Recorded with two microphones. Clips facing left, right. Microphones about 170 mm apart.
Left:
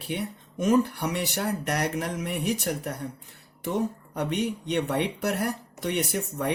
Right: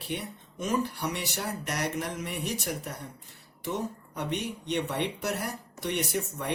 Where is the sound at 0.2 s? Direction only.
55° left (ahead or behind).